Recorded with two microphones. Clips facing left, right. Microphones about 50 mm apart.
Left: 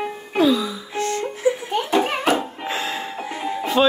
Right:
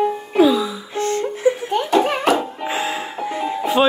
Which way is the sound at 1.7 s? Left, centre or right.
Centre.